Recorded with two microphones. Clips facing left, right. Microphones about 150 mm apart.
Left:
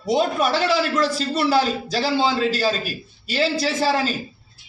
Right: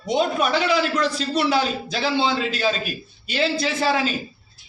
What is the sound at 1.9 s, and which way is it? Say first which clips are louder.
A man's voice: left 1 dB; 40° left (ahead or behind).